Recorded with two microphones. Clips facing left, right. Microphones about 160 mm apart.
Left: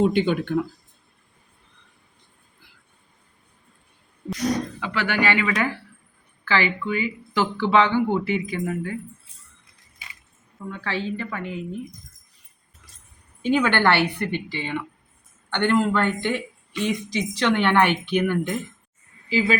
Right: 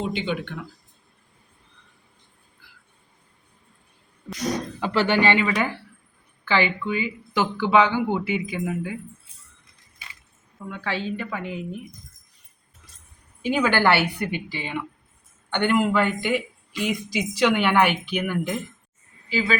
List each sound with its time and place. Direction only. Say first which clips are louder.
0.0 s speech: left 7 dB; 50° left (ahead or behind)
4.8 s speech: right 4 dB; 30° right (ahead or behind); by 9.0 s 10° right (ahead or behind)
10.7 s speech: even; 15° right (ahead or behind)
13.4 s speech: left 1 dB; 5° right (ahead or behind)